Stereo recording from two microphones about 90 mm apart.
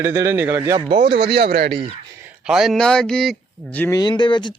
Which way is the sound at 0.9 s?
60° right (ahead or behind).